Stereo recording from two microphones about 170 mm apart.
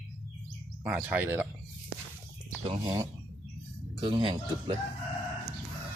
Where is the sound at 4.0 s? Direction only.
30° right (ahead or behind).